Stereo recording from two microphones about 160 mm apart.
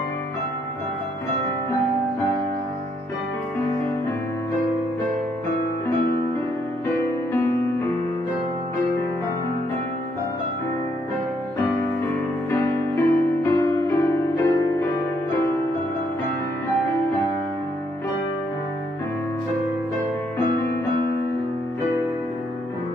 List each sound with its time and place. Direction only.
12.4 s music: 15° left (ahead or behind)